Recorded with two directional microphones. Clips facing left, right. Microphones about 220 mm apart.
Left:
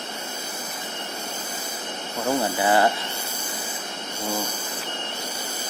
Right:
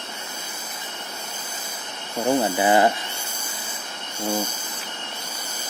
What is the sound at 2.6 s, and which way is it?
Speech, 20° right (ahead or behind).